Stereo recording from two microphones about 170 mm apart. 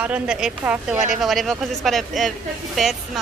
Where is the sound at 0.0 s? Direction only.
5° right (ahead or behind).